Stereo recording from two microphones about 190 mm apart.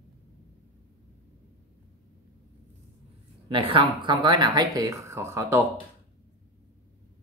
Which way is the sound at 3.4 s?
25° right (ahead or behind).